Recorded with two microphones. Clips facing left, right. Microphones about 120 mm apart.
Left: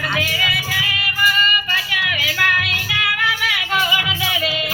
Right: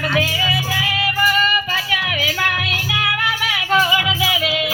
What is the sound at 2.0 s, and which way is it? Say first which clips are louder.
Music: right 2 dB; 40° right (ahead or behind).